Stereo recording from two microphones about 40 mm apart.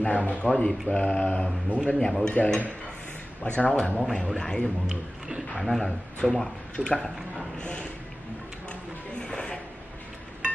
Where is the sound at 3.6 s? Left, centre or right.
Left.